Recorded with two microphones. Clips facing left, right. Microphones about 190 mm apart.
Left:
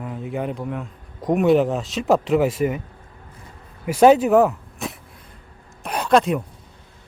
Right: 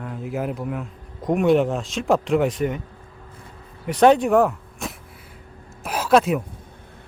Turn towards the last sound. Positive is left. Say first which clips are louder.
# even
turn(degrees=-5)  # may be behind; listen again after turning